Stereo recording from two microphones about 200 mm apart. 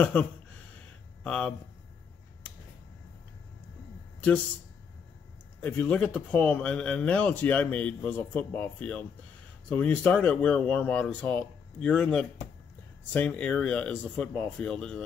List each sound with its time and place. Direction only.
0.0 s speech: 5° left (ahead or behind)
5.6 s speech: 5° left (ahead or behind)